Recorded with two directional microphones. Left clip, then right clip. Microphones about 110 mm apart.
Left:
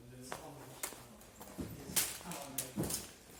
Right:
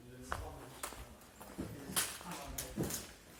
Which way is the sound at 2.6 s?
45° left (ahead or behind).